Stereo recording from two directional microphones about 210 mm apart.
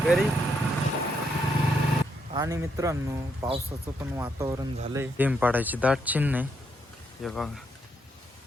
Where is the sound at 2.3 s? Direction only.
15° right (ahead or behind).